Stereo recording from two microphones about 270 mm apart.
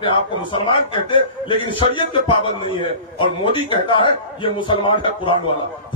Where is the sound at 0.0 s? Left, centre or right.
Centre.